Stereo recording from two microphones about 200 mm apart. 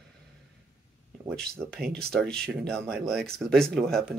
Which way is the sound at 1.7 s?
5° left (ahead or behind).